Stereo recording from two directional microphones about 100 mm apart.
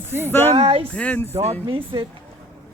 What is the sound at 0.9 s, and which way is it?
Speech, 15° left (ahead or behind).